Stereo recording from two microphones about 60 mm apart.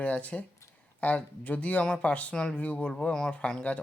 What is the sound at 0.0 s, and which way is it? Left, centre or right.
Speech, left.